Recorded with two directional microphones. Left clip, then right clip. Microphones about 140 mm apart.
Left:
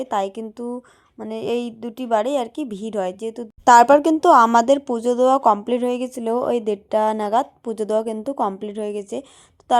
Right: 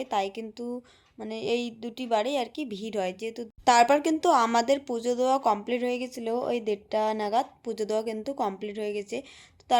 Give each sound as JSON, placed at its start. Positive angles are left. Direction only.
{"t": 0.0, "sound": "a woman's voice", "side_deg": 50}
{"t": 3.6, "sound": "a woman's voice", "side_deg": 65}